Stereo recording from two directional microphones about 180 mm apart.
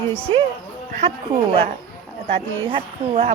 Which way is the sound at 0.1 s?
30° right (ahead or behind).